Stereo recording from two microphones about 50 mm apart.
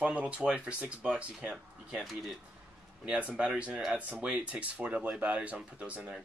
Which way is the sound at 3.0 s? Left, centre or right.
Centre.